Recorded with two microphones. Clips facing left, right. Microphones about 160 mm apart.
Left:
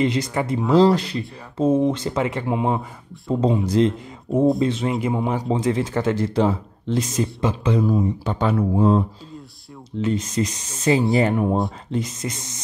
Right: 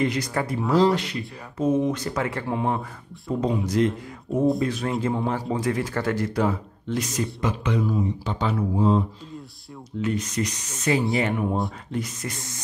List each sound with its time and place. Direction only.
0.0 s speech: 25° left (ahead or behind)
3.3 s speech: 30° left (ahead or behind)
7.8 s speech: 50° left (ahead or behind)
10.0 s speech: 25° left (ahead or behind)
11.9 s speech: 25° left (ahead or behind)